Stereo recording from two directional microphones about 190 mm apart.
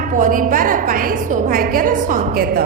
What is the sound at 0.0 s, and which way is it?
A woman's voice, 45° right (ahead or behind).